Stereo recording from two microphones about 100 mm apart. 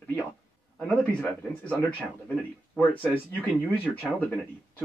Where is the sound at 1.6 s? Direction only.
15° left (ahead or behind).